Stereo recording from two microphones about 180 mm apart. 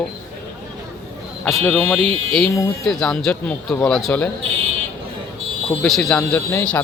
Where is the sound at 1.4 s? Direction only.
5° left (ahead or behind).